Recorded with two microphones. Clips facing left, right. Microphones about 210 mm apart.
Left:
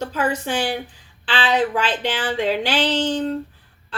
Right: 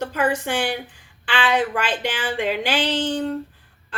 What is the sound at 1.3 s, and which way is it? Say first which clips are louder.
A woman's voice: left 1 dB; 10° right (ahead or behind).